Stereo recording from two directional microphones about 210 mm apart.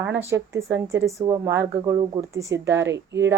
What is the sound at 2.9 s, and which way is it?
Speech, 55° right (ahead or behind).